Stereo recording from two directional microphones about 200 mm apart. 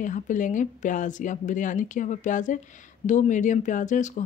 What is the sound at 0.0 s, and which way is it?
Speech, 40° left (ahead or behind).